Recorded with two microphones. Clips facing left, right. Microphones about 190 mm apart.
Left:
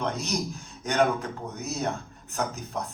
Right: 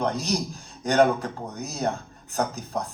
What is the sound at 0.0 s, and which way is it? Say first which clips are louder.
Speech: right 3 dB; 35° right (ahead or behind).